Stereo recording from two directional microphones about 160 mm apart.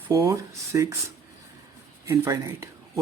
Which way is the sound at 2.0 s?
15° right (ahead or behind).